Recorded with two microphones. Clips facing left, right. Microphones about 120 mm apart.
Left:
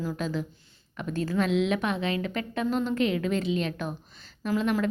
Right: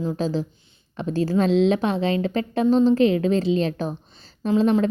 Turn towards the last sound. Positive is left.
turn(degrees=-30)  # may be behind; listen again after turning